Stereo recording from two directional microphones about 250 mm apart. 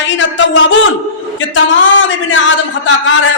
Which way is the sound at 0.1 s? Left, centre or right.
Left.